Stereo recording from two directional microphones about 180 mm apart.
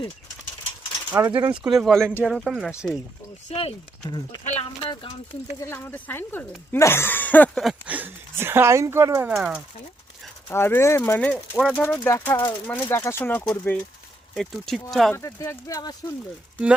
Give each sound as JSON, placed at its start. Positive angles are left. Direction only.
{"t": 1.1, "sound": "speech", "side_deg": -10}
{"t": 3.5, "sound": "speech", "side_deg": 30}
{"t": 5.5, "sound": "speech", "side_deg": 10}
{"t": 9.2, "sound": "speech", "side_deg": -5}
{"t": 10.5, "sound": "speech", "side_deg": 15}
{"t": 15.1, "sound": "speech", "side_deg": 15}